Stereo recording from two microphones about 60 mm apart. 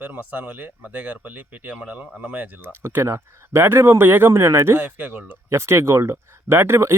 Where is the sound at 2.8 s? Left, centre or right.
Right.